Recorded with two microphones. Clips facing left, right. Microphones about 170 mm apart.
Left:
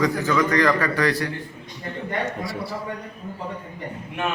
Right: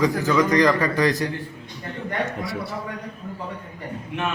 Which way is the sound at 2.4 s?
Centre (ahead or behind).